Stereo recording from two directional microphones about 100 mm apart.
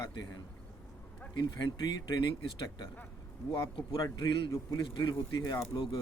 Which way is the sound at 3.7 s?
55° left (ahead or behind).